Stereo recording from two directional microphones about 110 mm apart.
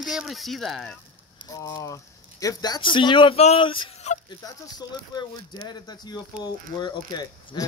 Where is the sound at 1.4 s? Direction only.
35° left (ahead or behind).